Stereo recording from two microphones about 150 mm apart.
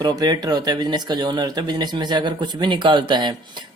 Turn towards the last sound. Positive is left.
turn(degrees=-30)  # may be behind; listen again after turning